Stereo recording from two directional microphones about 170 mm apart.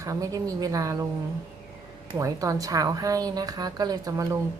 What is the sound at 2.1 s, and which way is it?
A woman's voice, 20° right (ahead or behind).